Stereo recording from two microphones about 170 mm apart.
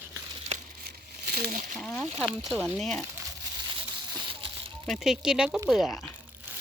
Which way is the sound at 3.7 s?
25° right (ahead or behind).